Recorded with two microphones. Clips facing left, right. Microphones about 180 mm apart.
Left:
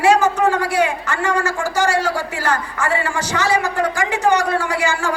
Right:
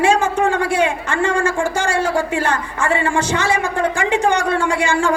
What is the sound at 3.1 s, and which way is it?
A woman's voice, 25° right (ahead or behind).